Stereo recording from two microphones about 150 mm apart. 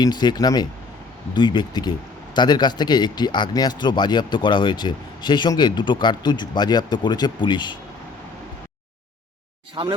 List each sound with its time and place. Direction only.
0.0 s speech: 30° left (ahead or behind)
9.8 s speech: 35° right (ahead or behind)